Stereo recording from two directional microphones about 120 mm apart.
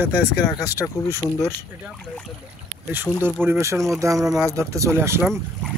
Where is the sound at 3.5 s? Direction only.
25° right (ahead or behind).